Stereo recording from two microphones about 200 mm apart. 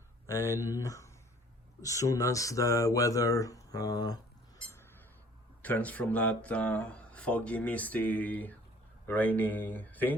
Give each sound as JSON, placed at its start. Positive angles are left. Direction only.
{"t": 0.3, "sound": "speech", "side_deg": 15}
{"t": 5.6, "sound": "speech", "side_deg": 10}